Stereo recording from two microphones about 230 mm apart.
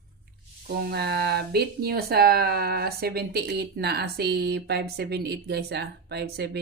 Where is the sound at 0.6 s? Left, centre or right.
Right.